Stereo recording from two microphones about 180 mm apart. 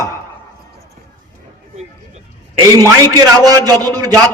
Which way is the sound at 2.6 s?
20° right (ahead or behind).